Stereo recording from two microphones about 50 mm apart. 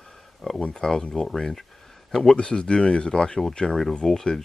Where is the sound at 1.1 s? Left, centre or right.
Centre.